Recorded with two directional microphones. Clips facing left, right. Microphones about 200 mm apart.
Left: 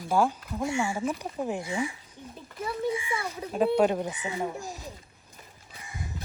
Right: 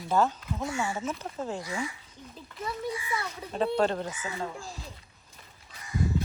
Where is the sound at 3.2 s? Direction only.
10° left (ahead or behind).